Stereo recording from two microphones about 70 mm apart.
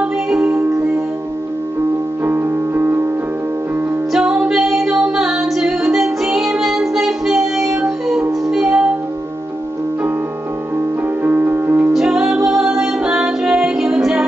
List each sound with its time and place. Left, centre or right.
2.2 s music: right
4.1 s music: centre
11.2 s music: right
11.9 s music: centre